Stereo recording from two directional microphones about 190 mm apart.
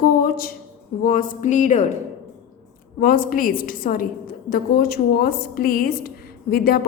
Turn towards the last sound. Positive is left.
turn(degrees=50)  # may be behind; listen again after turning